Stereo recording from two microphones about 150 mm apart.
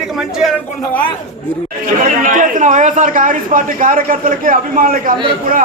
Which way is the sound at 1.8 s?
60° right (ahead or behind).